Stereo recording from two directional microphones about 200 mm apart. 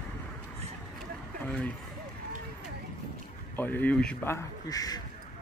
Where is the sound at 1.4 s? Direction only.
5° left (ahead or behind).